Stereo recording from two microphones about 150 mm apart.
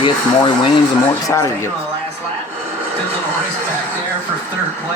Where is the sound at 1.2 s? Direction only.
20° left (ahead or behind).